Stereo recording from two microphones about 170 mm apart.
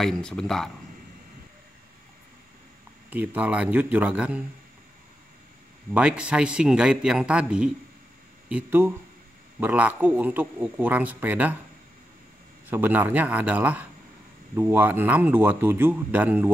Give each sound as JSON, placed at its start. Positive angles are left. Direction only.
{"t": 0.0, "sound": "a man's voice", "side_deg": 5}
{"t": 3.1, "sound": "speech", "side_deg": -10}
{"t": 5.9, "sound": "a man's voice", "side_deg": -5}
{"t": 12.6, "sound": "speech", "side_deg": -10}